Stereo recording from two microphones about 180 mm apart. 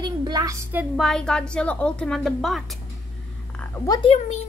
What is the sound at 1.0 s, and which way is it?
A woman's voice, 5° left (ahead or behind).